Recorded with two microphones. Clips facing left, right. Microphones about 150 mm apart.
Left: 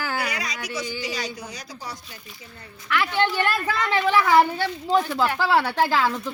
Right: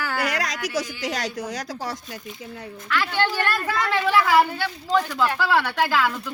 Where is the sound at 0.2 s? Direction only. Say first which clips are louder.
Right 4 dB; 90° right.